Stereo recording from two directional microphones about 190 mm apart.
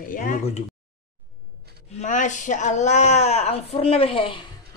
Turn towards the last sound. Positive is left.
turn(degrees=30)  # may be behind; listen again after turning